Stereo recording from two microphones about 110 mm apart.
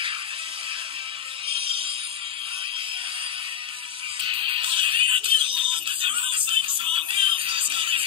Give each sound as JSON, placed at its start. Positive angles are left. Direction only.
{"t": 1.5, "sound": "music", "side_deg": -55}
{"t": 4.2, "sound": "music", "side_deg": -55}